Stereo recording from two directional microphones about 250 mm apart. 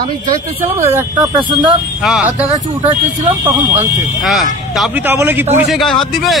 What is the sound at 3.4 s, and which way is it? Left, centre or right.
A man's voice, centre.